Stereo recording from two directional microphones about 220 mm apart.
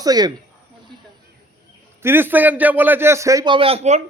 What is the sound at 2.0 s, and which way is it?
A man's voice, 10° right (ahead or behind).